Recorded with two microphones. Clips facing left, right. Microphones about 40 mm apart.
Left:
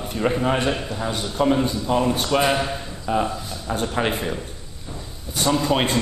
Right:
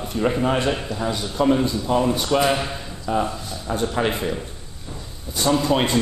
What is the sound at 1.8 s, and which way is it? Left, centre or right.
Speech, centre.